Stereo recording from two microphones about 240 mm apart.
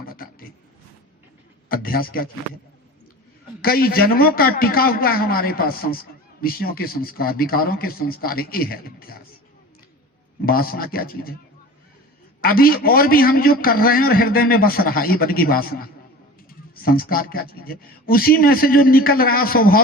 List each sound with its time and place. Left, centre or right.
0.0 s a sound: left
1.7 s a man's voice: left
3.6 s a man's voice: left
10.4 s a man's voice: left
12.4 s a man's voice: left